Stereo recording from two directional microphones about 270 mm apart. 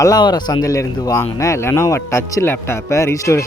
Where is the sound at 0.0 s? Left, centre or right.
Centre.